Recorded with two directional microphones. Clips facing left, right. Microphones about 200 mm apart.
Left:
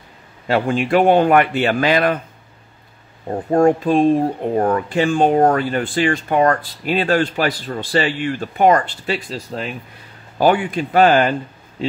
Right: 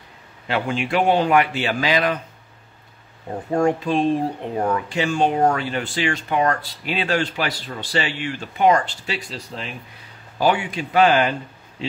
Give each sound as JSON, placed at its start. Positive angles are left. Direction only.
{"t": 0.5, "sound": "speech", "side_deg": 45}
{"t": 3.3, "sound": "speech", "side_deg": 50}